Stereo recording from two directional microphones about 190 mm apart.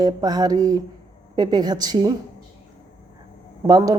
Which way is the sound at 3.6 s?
20° right (ahead or behind).